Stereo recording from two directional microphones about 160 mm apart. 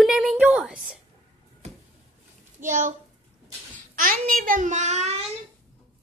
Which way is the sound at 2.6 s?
50° right (ahead or behind).